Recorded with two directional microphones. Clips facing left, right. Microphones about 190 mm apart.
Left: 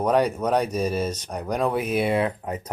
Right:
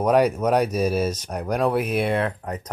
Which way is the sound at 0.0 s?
10° right (ahead or behind).